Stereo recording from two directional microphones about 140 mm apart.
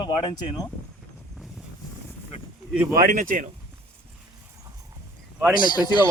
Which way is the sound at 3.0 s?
75° right (ahead or behind).